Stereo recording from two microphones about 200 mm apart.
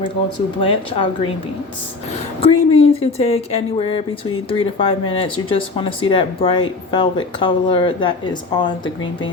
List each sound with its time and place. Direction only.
0.6 s speech: 25° left (ahead or behind)
2.4 s speech: 30° left (ahead or behind)